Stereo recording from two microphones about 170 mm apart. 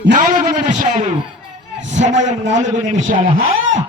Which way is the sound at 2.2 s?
90° right.